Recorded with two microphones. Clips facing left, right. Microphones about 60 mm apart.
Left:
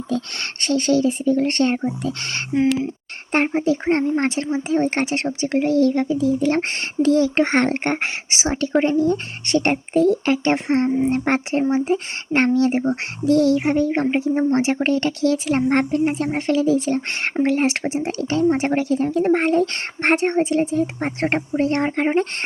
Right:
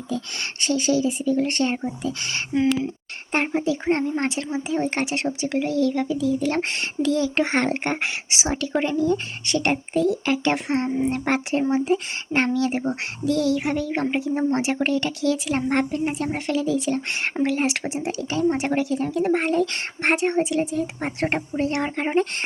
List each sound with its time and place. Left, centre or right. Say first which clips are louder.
0.1 s speech: left 3 dB; left
2.5 s speech: left 2 dB; left
3.6 s speech: left 3 dB; left
10.5 s a child's voice: left 4 dB; left
10.8 s speech: left 4 dB; centre
11.1 s a child's voice: left 3 dB; left
14.8 s a child's voice: left 4 dB; left
18.1 s speech: left 3 dB; left